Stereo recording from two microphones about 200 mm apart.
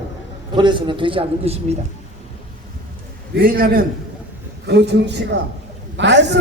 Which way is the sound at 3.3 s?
45° right (ahead or behind).